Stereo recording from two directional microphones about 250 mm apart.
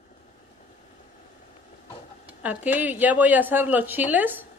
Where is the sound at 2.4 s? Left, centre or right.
Centre.